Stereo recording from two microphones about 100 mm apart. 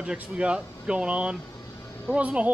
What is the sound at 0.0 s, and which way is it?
Speech, 10° right (ahead or behind).